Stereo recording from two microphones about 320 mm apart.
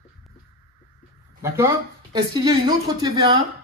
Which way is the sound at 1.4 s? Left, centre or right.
Centre.